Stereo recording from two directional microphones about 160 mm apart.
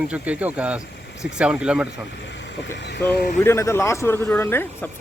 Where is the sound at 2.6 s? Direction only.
90° left.